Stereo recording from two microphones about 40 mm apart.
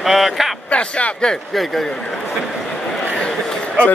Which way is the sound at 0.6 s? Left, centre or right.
Left.